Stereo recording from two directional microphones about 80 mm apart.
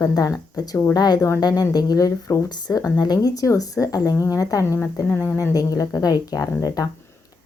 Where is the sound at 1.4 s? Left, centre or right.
Left.